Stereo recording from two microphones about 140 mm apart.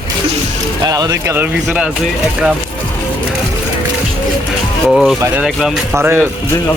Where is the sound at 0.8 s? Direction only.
30° right (ahead or behind).